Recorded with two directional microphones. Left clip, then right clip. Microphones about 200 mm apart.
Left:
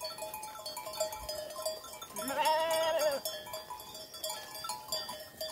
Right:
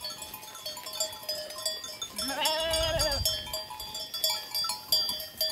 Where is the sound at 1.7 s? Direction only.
55° left (ahead or behind).